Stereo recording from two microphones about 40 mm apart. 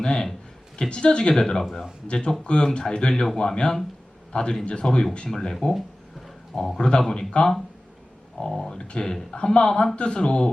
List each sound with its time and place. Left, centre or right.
0.0 s a man's voice: centre
5.3 s speech: centre
6.7 s speech: left